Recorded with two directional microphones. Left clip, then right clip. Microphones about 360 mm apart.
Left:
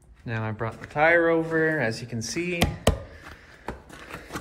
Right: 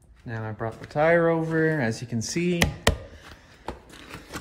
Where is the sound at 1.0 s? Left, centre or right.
Right.